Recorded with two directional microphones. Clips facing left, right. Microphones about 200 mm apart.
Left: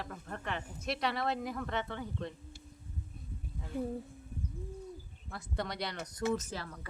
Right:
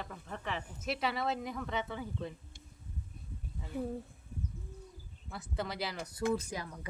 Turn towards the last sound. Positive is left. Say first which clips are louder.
# right 1 dB
turn(degrees=-15)  # may be behind; listen again after turning